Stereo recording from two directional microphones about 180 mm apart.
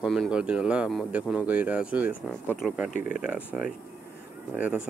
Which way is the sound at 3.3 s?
5° right (ahead or behind).